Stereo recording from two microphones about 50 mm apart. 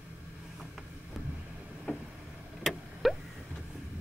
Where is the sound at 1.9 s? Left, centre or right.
Left.